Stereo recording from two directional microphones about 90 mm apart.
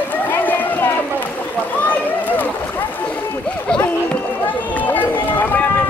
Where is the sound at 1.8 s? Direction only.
20° left (ahead or behind).